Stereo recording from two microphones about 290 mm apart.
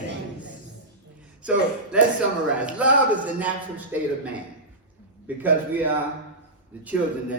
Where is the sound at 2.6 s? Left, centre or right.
Centre.